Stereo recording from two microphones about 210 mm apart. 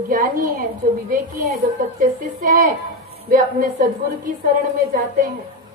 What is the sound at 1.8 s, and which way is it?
A woman's voice, 40° right (ahead or behind).